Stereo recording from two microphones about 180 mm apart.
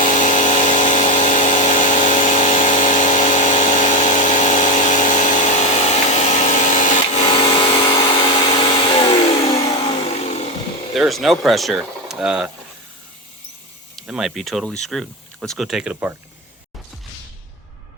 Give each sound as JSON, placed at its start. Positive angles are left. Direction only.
{"t": 0.0, "sound": "a sound", "side_deg": 45}
{"t": 10.9, "sound": "speech", "side_deg": 0}
{"t": 13.9, "sound": "speech", "side_deg": 0}